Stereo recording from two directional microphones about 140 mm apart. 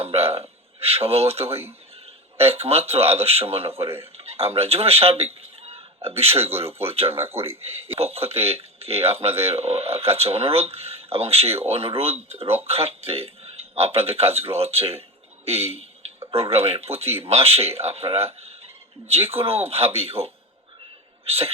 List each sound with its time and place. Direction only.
0.0 s a sound: 45° right (ahead or behind)
0.8 s speech: 45° right (ahead or behind)
7.2 s speech: 15° right (ahead or behind)
7.6 s speech: 45° right (ahead or behind)